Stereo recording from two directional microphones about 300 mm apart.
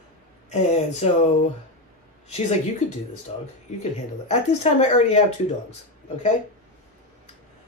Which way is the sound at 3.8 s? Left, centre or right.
Left.